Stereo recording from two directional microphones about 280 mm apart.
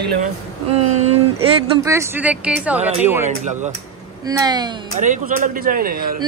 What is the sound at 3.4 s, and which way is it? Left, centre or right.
Speech, right.